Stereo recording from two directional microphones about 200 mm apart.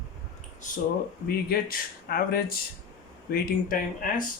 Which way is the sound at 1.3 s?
45° left (ahead or behind).